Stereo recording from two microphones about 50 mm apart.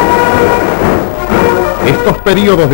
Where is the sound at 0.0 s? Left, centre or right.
Centre.